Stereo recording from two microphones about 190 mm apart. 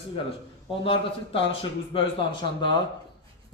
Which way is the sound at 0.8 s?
30° left (ahead or behind).